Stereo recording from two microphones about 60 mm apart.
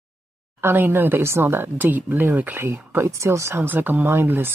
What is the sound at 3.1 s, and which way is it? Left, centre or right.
Speech, right.